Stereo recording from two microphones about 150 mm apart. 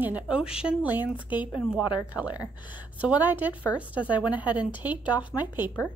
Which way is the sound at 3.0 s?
10° right (ahead or behind).